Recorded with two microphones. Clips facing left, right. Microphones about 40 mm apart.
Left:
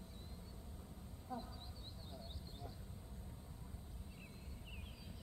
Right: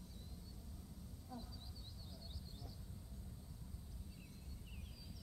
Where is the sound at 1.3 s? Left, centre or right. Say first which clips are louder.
Left 6 dB; left.